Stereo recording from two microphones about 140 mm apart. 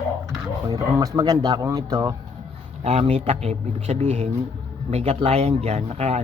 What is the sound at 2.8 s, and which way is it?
Speech, 45° right (ahead or behind).